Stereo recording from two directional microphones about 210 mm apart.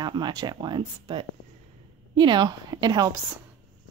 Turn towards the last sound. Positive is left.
turn(degrees=-20)  # may be behind; listen again after turning